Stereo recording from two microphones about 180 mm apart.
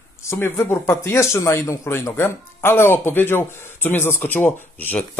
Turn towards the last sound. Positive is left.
turn(degrees=10)  # may be behind; listen again after turning